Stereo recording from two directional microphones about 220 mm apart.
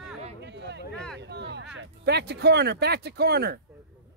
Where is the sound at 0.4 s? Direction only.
50° right (ahead or behind).